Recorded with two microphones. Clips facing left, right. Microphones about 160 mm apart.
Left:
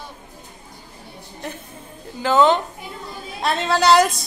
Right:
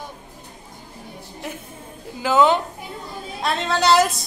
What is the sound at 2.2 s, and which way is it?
A woman's voice, 10° right (ahead or behind).